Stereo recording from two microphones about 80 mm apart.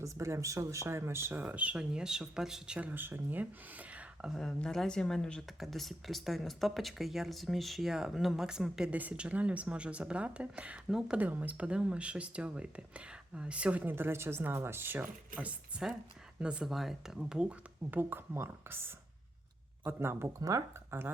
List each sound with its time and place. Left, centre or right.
0.0 s speech: right; by 2.9 s centre
2.9 s speech: right
4.3 s speech: centre
8.9 s speech: centre
10.8 s speech: centre
11.2 s speech: right
13.9 s speech: right; by 16.6 s centre
16.6 s speech: centre
17.9 s speech: right
20.5 s speech: right
20.9 s speech: right